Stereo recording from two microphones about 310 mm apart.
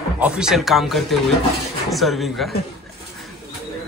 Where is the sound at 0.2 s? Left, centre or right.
Centre.